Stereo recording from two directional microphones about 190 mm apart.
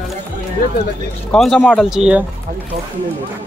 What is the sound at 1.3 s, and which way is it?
Speech, centre (ahead or behind).